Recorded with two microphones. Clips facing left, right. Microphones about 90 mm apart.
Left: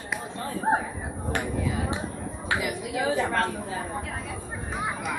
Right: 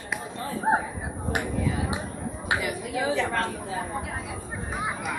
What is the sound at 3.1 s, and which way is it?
Speech, 35° left (ahead or behind).